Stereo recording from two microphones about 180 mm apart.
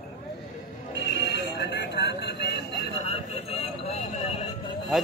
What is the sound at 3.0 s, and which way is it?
Vehicle, 35° left (ahead or behind).